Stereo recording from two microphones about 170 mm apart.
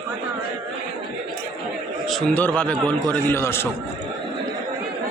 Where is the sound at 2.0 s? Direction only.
10° left (ahead or behind).